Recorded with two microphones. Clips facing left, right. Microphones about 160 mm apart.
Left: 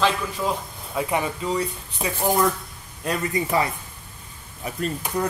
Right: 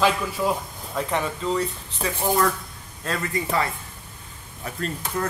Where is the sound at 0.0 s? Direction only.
5° right (ahead or behind).